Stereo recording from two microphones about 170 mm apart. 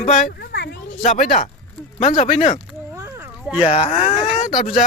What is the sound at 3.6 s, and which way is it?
Speech, 35° left (ahead or behind).